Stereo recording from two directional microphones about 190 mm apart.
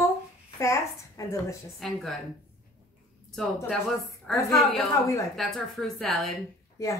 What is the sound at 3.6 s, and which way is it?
A woman's voice, centre (ahead or behind).